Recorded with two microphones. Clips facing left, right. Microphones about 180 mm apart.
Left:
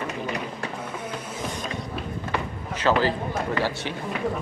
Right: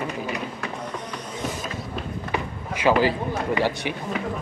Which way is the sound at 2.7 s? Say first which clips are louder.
Right 2 dB; 10° right (ahead or behind).